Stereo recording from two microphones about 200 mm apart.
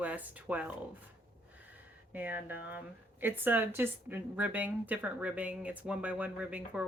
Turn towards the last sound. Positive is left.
turn(degrees=-5)  # may be behind; listen again after turning